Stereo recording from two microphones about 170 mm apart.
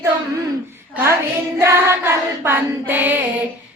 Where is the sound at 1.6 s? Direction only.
15° right (ahead or behind).